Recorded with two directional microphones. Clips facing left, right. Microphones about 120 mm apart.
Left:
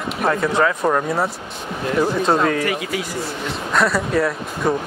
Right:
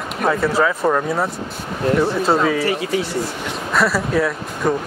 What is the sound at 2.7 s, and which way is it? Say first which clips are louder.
Speech: right 3 dB; 30° right (ahead or behind).